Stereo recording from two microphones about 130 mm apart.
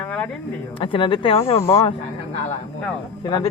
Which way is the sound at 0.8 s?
40° left (ahead or behind).